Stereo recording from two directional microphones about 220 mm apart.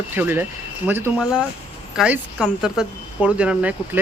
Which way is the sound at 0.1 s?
10° right (ahead or behind).